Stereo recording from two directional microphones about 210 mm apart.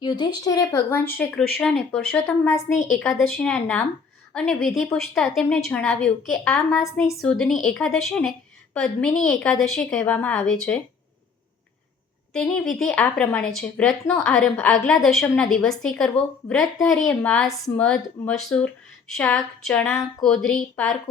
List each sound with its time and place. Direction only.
0.0 s speech: 20° left (ahead or behind)
2.6 s a woman's voice: 30° left (ahead or behind)
3.0 s a woman's voice: 5° left (ahead or behind)
6.7 s speech: 15° left (ahead or behind)
7.1 s a woman's voice: centre (ahead or behind)
12.3 s a woman's voice: 5° left (ahead or behind)